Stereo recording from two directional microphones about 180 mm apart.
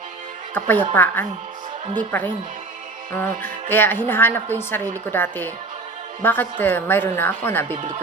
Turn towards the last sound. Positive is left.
turn(degrees=10)  # may be behind; listen again after turning